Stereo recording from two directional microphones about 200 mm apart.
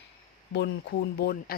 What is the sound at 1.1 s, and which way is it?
Speech, 50° left (ahead or behind).